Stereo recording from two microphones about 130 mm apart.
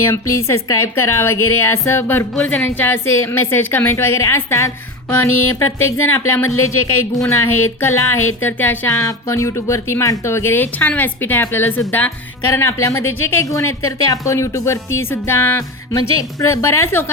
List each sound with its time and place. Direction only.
0.0 s speech: 20° left (ahead or behind)